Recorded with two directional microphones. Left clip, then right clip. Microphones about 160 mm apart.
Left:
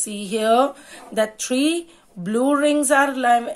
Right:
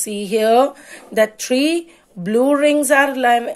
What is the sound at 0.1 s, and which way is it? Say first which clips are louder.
Speech: right 4 dB; 35° right (ahead or behind).